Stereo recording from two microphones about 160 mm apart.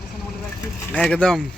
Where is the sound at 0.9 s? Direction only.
5° left (ahead or behind).